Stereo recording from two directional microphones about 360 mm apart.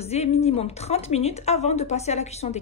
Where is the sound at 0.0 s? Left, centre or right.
Centre.